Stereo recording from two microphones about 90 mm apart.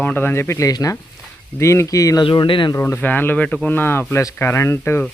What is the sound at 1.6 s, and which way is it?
Speech, 30° left (ahead or behind).